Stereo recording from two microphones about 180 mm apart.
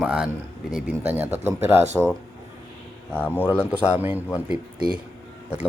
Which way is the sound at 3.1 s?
10° left (ahead or behind).